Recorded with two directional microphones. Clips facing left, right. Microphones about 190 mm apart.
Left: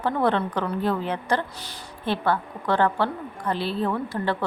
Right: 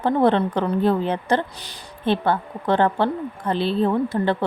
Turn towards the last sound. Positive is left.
turn(degrees=-25)  # may be behind; listen again after turning